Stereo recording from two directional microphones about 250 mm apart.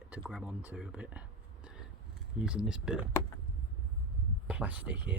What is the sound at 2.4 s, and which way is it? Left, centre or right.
Speech, centre.